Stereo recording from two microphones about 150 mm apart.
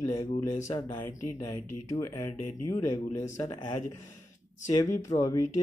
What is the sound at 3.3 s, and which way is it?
Speech, 30° left (ahead or behind).